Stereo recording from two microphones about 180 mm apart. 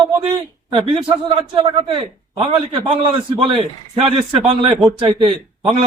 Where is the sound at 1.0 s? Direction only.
30° right (ahead or behind).